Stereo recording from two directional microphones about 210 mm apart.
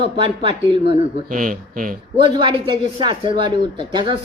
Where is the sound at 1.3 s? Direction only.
40° right (ahead or behind).